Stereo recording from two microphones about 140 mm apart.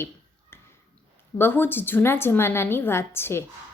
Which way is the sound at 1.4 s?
15° left (ahead or behind).